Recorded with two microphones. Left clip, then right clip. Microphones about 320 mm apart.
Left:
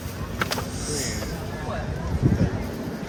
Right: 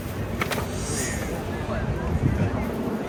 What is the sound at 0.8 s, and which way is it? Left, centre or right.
Music, left.